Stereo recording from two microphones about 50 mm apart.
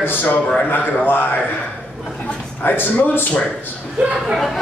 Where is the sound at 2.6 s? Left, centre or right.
Left.